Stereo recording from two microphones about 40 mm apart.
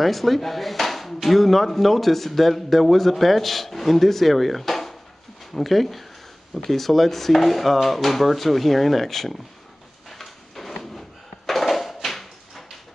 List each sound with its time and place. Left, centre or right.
0.0 s speech: centre
10.0 s drawer open or close: centre